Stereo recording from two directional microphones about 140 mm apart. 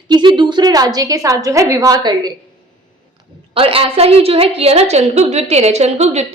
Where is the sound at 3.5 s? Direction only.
40° right (ahead or behind).